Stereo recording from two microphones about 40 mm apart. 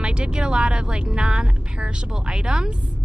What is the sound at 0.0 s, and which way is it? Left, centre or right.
A woman's voice, right.